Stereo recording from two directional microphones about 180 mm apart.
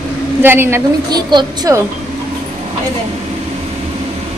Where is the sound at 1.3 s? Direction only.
25° right (ahead or behind).